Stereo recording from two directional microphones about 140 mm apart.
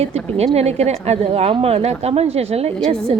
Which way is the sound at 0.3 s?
50° right (ahead or behind).